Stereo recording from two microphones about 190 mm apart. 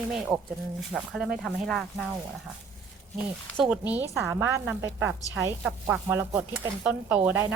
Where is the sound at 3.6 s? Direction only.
5° right (ahead or behind).